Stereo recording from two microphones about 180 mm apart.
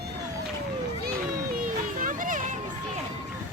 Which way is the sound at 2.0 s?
45° right (ahead or behind).